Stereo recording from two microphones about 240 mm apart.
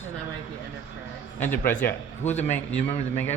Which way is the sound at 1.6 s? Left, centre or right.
Left.